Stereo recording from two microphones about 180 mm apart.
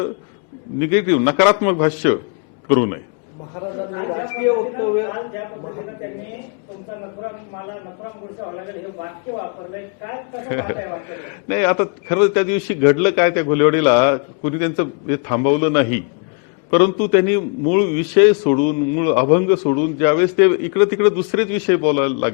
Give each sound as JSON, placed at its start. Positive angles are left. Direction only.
{"t": 0.8, "sound": "a man's voice", "side_deg": 15}
{"t": 3.9, "sound": "a man's voice", "side_deg": 25}
{"t": 10.1, "sound": "a man's voice", "side_deg": 20}